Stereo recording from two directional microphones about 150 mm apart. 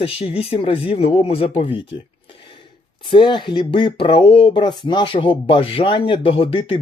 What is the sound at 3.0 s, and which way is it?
Speech, 30° left (ahead or behind).